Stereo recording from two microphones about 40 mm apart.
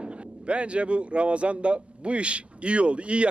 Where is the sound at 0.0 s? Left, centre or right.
Right.